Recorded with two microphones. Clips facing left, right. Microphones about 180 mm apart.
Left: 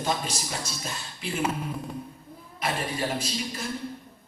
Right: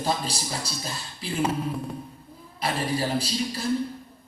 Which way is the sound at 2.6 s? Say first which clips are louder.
Right 3 dB; 35° right (ahead or behind).